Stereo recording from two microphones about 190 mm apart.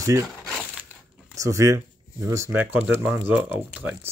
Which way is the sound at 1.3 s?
15° right (ahead or behind).